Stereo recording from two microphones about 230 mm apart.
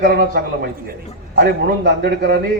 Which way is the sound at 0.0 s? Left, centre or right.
Right.